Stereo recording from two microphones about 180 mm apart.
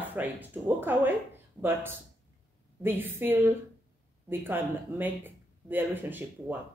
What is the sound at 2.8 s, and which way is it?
Speech, 10° right (ahead or behind).